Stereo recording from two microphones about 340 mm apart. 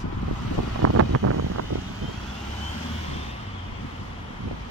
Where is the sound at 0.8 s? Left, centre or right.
Right.